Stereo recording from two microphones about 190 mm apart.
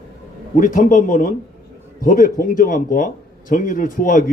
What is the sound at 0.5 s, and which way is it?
Speech, 45° left (ahead or behind).